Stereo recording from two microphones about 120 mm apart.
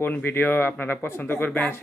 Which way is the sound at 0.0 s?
15° left (ahead or behind).